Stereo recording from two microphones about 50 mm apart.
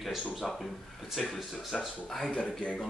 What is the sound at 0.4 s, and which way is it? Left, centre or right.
A man's voice, centre.